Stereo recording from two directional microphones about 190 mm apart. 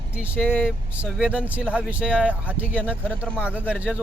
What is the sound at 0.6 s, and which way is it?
Speech, centre (ahead or behind).